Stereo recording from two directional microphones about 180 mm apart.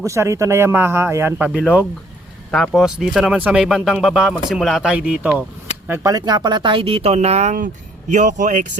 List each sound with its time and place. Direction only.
0.0 s speech: 15° right (ahead or behind)
2.5 s speech: centre (ahead or behind)
5.9 s speech: 20° right (ahead or behind); by 8.8 s 45° right (ahead or behind)